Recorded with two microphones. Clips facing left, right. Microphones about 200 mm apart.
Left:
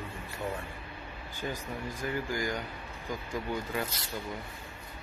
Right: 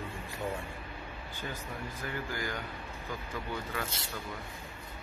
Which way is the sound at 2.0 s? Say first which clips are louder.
Left 5 dB; 15° left (ahead or behind).